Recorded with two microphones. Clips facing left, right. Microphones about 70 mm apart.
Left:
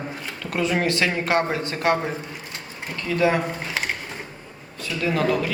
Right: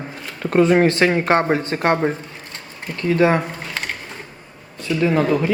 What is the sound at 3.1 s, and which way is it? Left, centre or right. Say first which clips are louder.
Speech: right 5 dB; right.